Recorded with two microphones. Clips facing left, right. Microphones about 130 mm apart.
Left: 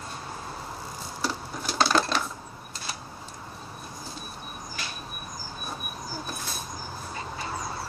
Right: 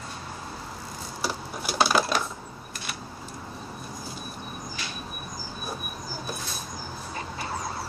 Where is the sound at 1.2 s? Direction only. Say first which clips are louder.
Even; 10° right (ahead or behind).